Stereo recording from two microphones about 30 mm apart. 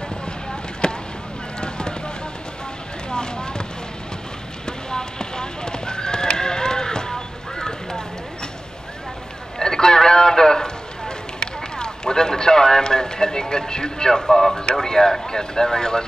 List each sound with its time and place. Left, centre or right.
0.8 s a sound: left
3.1 s vehicle: left
4.6 s horse: left
9.6 s livestock: left
14.2 s speech: centre